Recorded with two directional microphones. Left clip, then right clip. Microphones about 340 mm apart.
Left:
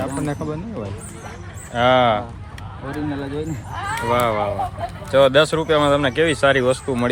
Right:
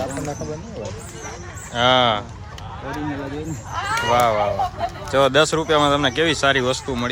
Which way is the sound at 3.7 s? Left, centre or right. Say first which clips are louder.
Right 5 dB; right.